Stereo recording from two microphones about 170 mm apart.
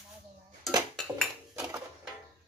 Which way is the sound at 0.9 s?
Centre (ahead or behind).